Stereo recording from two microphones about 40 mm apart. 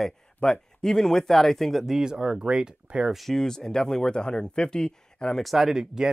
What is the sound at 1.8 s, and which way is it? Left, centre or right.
Speech, centre.